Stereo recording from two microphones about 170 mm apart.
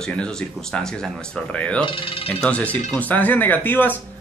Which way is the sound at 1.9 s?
30° left (ahead or behind).